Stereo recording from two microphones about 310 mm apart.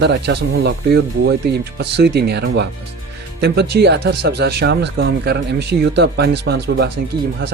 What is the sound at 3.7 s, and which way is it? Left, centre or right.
Speech, right.